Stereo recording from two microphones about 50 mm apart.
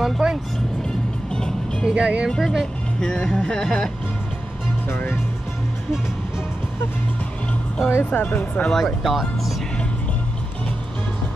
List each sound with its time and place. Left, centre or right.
0.0 s music: centre
0.8 s music: centre
1.9 s speech: right
2.3 s speech: centre
3.3 s music: centre
4.8 s speech: left
8.0 s speech: left
8.6 s music: centre
9.0 s speech: centre